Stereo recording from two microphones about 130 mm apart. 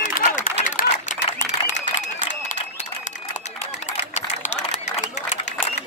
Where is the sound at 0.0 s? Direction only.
90° left.